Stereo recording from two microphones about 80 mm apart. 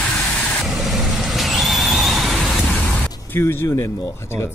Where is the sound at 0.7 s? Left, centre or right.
Centre.